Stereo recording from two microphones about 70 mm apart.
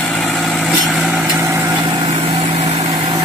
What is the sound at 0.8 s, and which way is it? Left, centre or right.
Vehicle, centre.